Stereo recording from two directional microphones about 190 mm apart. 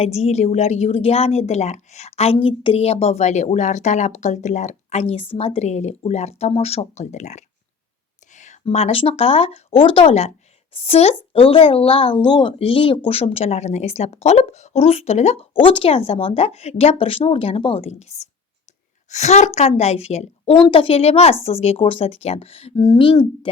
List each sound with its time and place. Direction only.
0.0 s a woman's voice: 35° left (ahead or behind)